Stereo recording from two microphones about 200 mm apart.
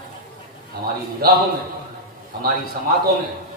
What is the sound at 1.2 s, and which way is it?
Speech, 50° right (ahead or behind).